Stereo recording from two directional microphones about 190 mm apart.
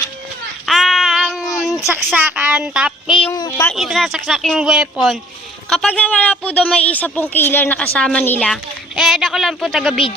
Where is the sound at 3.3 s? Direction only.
15° left (ahead or behind).